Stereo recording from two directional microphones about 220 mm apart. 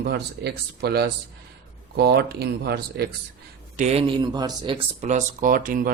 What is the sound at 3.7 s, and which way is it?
Speech, 30° right (ahead or behind).